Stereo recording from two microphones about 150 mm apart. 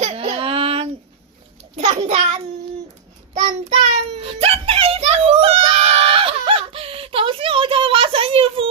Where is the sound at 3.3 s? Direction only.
45° right (ahead or behind).